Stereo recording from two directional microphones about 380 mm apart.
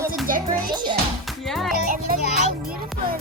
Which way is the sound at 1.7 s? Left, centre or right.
Right.